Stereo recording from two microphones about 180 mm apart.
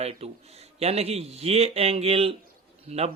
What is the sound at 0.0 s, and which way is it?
A man's voice, 35° right (ahead or behind).